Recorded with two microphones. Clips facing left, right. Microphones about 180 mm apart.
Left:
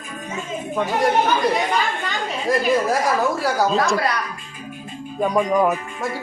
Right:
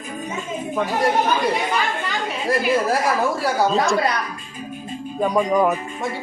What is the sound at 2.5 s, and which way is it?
Speech, centre (ahead or behind).